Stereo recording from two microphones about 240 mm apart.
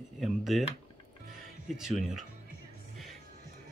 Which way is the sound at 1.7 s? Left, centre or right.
Centre.